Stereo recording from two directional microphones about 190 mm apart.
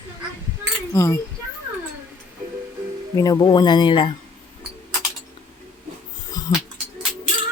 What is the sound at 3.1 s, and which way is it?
Speech, 20° left (ahead or behind).